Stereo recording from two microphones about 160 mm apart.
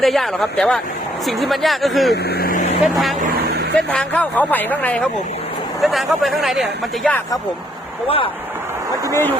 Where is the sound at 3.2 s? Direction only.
90° right.